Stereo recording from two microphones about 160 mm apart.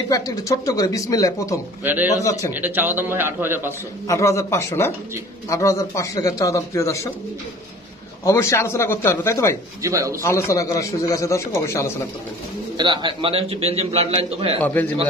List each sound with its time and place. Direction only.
0.1 s speech: 20° left (ahead or behind)
2.5 s a man's voice: 10° right (ahead or behind)
4.1 s speech: 20° left (ahead or behind)
8.2 s a man's voice: 15° left (ahead or behind)
9.8 s speech: 20° right (ahead or behind)
10.2 s a man's voice: 20° left (ahead or behind)
12.7 s a man's voice: 30° right (ahead or behind)
14.6 s a man's voice: 10° left (ahead or behind)